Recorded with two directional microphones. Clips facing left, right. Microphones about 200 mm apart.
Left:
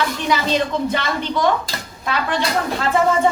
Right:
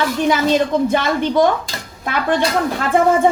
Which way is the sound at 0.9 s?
50° right (ahead or behind).